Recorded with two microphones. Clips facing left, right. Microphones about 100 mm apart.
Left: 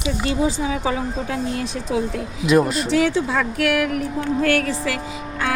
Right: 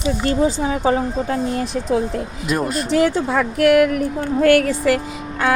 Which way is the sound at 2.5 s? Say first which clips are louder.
Left 5 dB; centre (ahead or behind).